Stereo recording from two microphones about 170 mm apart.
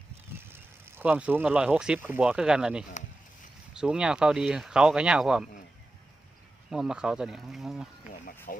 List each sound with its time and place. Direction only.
0.3 s speech: 15° right (ahead or behind)
6.7 s speech: 5° right (ahead or behind)
8.5 s speech: 60° left (ahead or behind)